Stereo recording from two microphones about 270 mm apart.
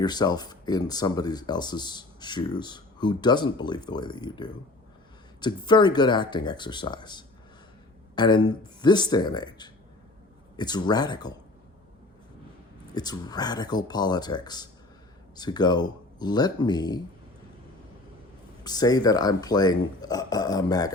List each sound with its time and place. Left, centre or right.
0.0 s speech: centre
12.9 s speech: centre
18.6 s speech: centre